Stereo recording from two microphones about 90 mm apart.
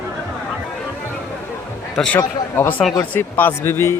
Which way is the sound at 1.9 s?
10° left (ahead or behind).